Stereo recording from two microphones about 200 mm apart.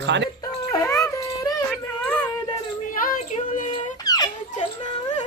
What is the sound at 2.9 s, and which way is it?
Child singing, 45° left (ahead or behind).